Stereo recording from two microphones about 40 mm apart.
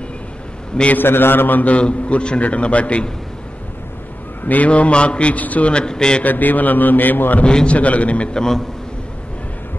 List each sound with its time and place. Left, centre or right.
0.9 s a man's voice: left
1.6 s a man's voice: left
4.5 s a man's voice: left
5.7 s a man's voice: left
6.2 s a man's voice: left
7.4 s a man's voice: left
7.7 s a man's voice: left
8.4 s a man's voice: centre